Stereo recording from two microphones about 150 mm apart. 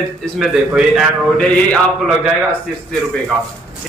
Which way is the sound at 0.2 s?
Centre (ahead or behind).